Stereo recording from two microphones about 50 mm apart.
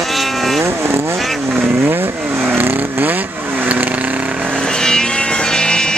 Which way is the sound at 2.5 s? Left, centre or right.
Right.